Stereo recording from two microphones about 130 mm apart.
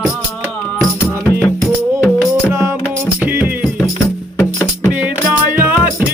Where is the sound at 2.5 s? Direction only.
20° right (ahead or behind).